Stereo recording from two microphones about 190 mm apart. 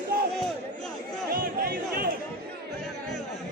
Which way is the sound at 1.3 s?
50° right (ahead or behind).